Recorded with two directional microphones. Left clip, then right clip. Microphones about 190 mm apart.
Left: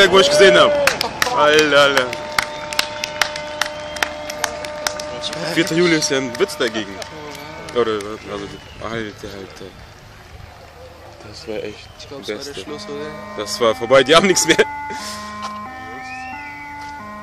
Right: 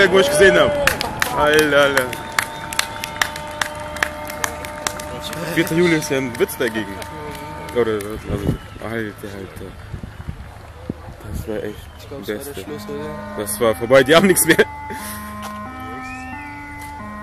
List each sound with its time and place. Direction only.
0.0 s speech: 15° left (ahead or behind)
0.7 s run: 40° left (ahead or behind)
1.4 s speech: 10° left (ahead or behind)
2.0 s run: 35° left (ahead or behind)
5.3 s a sound: 50° left (ahead or behind)
5.6 s speech: 20° left (ahead or behind)
11.5 s speech: centre (ahead or behind)
12.5 s speech: 50° left (ahead or behind)
13.4 s speech: 5° left (ahead or behind)